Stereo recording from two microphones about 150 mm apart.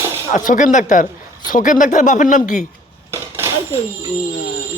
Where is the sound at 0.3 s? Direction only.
55° left (ahead or behind).